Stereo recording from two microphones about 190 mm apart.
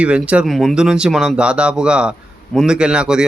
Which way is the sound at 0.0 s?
5° right (ahead or behind).